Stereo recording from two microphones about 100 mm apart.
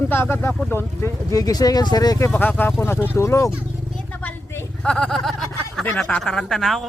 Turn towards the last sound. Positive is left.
turn(degrees=0)  # may be behind; listen again after turning